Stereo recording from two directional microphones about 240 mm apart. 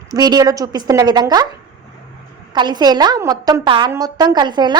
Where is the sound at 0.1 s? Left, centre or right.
Centre.